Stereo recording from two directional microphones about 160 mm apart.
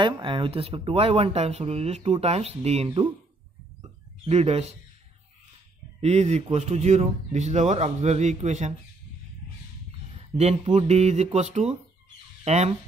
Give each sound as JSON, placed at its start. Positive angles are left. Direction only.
{"t": 0.0, "sound": "speech", "side_deg": -30}
{"t": 4.2, "sound": "speech", "side_deg": -40}
{"t": 5.9, "sound": "speech", "side_deg": -45}
{"t": 10.3, "sound": "speech", "side_deg": -40}